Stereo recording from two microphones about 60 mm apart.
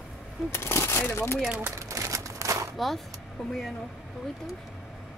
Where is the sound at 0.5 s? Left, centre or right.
Left.